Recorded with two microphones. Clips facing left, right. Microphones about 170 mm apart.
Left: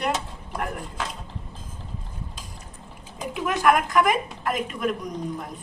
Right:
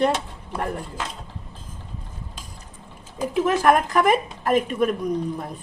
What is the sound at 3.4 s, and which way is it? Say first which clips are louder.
A woman's voice: right 1 dB; 35° right (ahead or behind).